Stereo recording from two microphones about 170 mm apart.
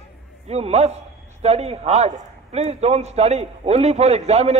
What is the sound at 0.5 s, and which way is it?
A man's voice, 40° right (ahead or behind).